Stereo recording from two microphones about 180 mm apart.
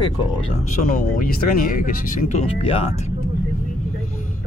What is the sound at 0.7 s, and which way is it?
Speech, 45° left (ahead or behind).